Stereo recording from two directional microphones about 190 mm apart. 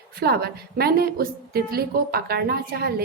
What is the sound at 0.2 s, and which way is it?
A woman's voice, 55° right (ahead or behind).